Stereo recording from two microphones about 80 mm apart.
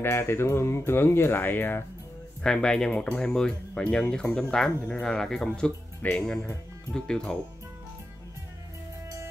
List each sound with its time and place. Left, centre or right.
0.0 s speech: left
2.4 s speech: centre